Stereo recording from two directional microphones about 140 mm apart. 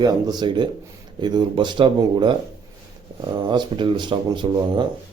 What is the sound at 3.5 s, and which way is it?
Speech, 35° right (ahead or behind).